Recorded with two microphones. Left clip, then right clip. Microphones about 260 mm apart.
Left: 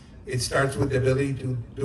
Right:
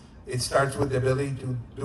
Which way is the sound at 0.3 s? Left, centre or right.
Right.